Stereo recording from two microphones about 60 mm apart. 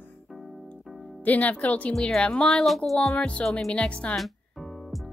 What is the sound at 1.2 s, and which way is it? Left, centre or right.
Speech, left.